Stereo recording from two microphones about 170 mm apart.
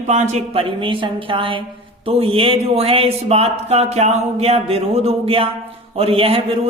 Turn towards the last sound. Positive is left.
turn(degrees=-35)  # may be behind; listen again after turning